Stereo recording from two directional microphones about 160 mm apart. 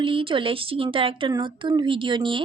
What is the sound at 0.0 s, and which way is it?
A woman's voice, 35° right (ahead or behind).